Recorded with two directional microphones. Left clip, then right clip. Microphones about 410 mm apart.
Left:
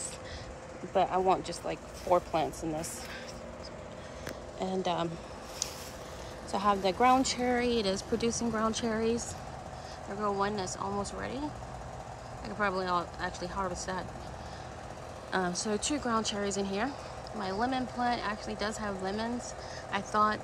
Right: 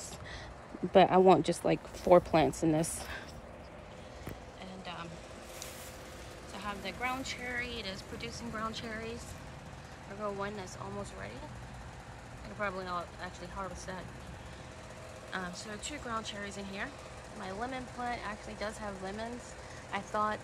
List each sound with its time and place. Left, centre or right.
0.9 s speech: right
2.4 s speech: right
4.6 s speech: centre
6.5 s speech: centre
10.2 s speech: centre
12.5 s speech: centre
15.3 s speech: centre